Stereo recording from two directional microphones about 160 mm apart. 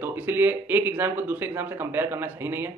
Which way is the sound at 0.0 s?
10° right (ahead or behind).